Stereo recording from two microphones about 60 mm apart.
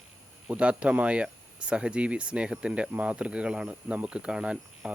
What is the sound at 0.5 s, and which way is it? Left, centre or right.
Speech, centre.